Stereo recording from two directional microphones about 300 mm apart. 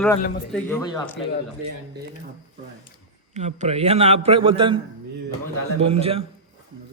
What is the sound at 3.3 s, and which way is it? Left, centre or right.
A man's voice, right.